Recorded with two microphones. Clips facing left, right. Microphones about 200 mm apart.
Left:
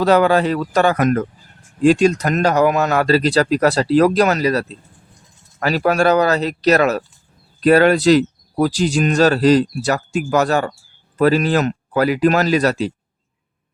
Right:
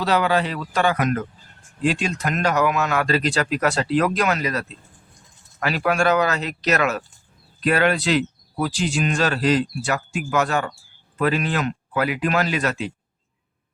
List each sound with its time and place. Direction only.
0.0 s speech: 45° left (ahead or behind)